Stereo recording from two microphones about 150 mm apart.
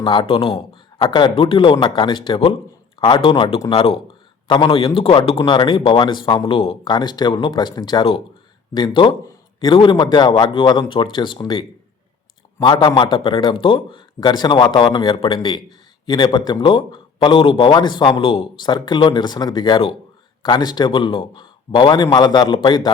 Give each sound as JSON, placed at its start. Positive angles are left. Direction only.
{"t": 0.0, "sound": "a man's voice", "side_deg": 35}